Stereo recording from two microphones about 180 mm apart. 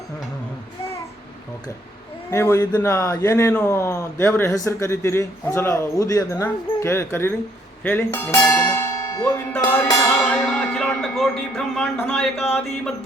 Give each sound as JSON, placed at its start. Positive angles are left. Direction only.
{"t": 2.3, "sound": "speech", "side_deg": 15}
{"t": 9.7, "sound": "music", "side_deg": 20}
{"t": 10.2, "sound": "music", "side_deg": 5}
{"t": 11.9, "sound": "speech", "side_deg": 5}